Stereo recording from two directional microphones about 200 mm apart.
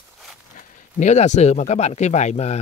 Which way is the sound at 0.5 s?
35° left (ahead or behind).